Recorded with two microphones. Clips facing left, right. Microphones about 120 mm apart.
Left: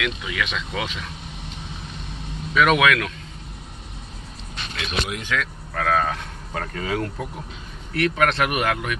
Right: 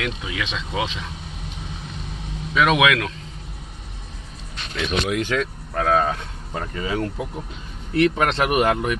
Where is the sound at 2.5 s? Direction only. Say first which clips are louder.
Even; 20° right (ahead or behind).